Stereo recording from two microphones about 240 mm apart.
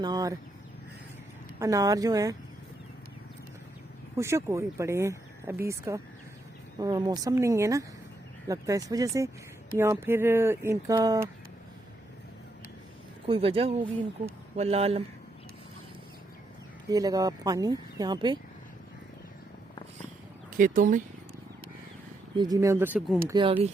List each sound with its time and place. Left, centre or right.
0.0 s speech: centre
1.5 s speech: centre
4.2 s speech: centre
13.2 s speech: right
16.9 s speech: centre
20.6 s speech: right
22.4 s speech: centre
23.3 s speech: centre